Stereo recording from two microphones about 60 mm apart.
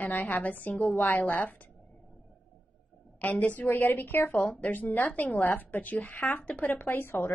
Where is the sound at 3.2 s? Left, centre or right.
Left.